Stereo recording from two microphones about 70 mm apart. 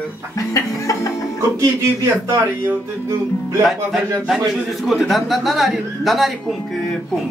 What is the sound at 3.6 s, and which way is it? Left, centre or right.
Speech, centre.